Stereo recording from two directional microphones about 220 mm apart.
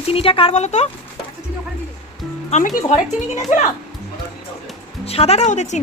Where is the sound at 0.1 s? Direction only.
25° left (ahead or behind).